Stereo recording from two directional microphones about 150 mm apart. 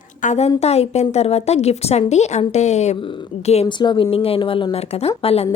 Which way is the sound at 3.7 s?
30° left (ahead or behind).